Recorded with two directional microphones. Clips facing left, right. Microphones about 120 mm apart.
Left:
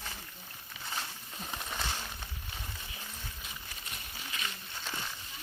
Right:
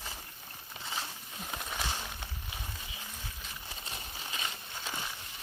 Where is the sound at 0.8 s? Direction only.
5° right (ahead or behind).